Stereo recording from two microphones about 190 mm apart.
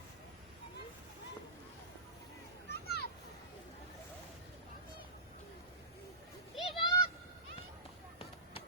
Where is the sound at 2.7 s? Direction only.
55° left (ahead or behind).